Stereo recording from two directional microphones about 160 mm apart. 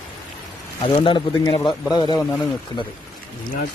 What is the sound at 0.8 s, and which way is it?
A man's voice, 30° left (ahead or behind).